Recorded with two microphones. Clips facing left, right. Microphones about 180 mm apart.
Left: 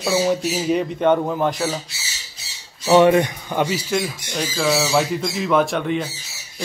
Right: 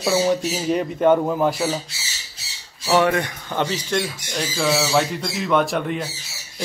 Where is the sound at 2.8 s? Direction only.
20° left (ahead or behind).